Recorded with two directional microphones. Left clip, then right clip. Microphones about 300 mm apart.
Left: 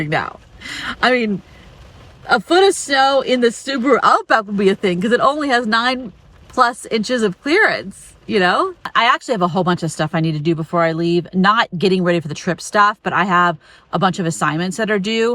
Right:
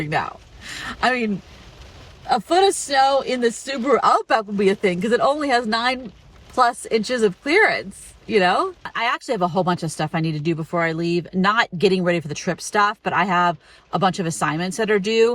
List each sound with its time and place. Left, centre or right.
0.0 s speech: centre
2.3 s speech: centre